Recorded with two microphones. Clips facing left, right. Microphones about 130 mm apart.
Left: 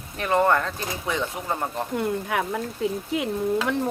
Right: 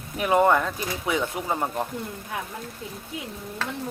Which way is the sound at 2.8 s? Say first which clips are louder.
Left 12 dB; 85° left.